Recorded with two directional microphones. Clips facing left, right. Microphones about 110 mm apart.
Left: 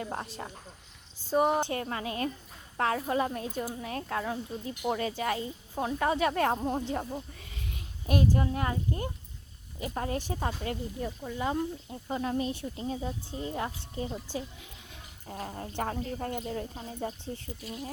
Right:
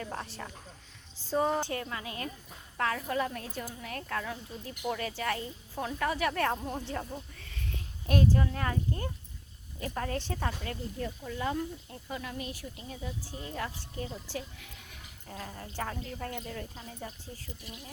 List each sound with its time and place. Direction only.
0.0 s a woman's voice: 25° left (ahead or behind)
1.7 s speech: 35° left (ahead or behind)
10.2 s a woman's voice: 15° left (ahead or behind)
10.4 s speech: 25° left (ahead or behind)
11.3 s speech: 20° left (ahead or behind)
12.0 s speech: 35° left (ahead or behind)
13.4 s speech: 25° left (ahead or behind)
15.3 s speech: 35° left (ahead or behind)